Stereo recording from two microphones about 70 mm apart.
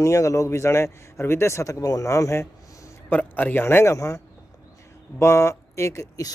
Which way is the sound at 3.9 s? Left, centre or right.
Left.